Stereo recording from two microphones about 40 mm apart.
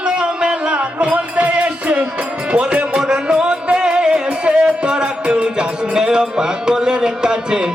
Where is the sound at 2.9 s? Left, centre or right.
Centre.